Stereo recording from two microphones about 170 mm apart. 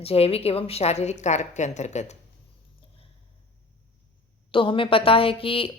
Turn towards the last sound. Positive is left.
turn(degrees=30)  # may be behind; listen again after turning